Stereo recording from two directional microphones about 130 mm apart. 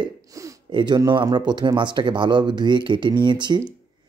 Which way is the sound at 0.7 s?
35° right (ahead or behind).